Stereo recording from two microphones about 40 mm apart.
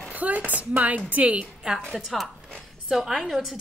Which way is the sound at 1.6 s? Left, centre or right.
Right.